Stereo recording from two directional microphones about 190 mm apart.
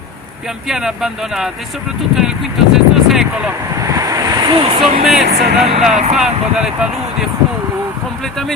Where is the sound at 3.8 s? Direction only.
15° right (ahead or behind).